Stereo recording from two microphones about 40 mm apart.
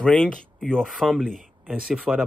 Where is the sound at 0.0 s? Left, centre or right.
Left.